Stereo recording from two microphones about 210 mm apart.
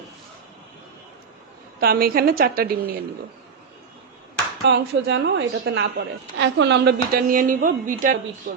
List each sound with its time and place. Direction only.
1.8 s a woman's voice: 45° right (ahead or behind)
4.7 s a woman's voice: 55° right (ahead or behind); by 8.2 s 40° right (ahead or behind)
8.5 s speech: 60° right (ahead or behind)